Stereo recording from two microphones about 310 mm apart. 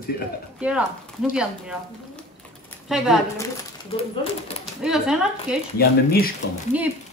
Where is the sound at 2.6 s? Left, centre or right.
Centre.